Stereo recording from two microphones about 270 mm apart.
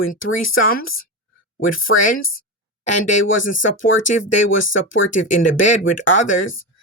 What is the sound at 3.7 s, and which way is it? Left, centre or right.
Speech, left.